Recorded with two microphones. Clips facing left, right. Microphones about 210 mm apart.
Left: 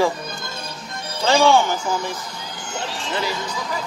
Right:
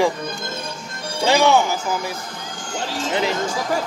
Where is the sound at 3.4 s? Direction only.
45° right (ahead or behind).